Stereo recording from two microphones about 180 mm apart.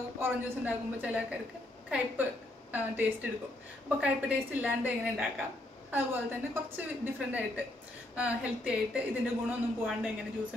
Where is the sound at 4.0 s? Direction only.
10° right (ahead or behind).